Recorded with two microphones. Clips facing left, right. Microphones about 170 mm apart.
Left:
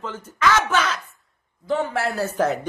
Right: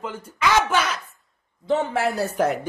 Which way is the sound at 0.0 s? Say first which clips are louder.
Left 2 dB; 10° right (ahead or behind).